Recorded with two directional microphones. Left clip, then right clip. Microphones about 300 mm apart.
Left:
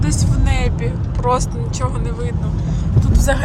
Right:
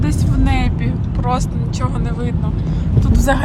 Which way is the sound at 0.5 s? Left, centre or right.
Centre.